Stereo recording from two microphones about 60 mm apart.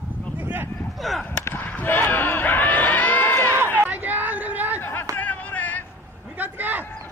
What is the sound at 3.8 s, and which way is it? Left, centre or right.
Chatter, right.